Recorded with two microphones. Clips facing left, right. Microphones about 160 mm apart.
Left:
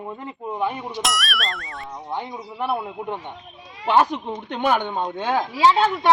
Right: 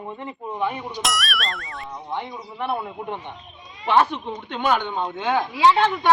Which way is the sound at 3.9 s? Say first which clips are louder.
Left 1 dB; 40° left (ahead or behind).